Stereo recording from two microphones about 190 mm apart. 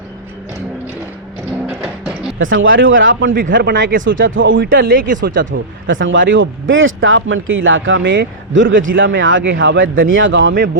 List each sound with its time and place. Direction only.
1.6 s a sound: centre (ahead or behind)
2.4 s speech: 90° right
3.3 s speech: 45° right (ahead or behind)
4.0 s speech: 85° right
4.7 s speech: 50° right (ahead or behind)
5.5 s speech: 80° right
9.5 s speech: 75° right (ahead or behind)